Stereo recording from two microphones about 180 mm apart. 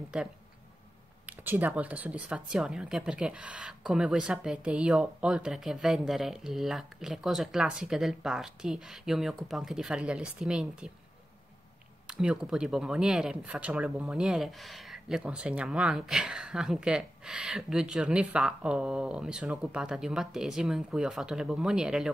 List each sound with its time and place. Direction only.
0.1 s speech: 5° right (ahead or behind)
12.1 s speech: 5° right (ahead or behind)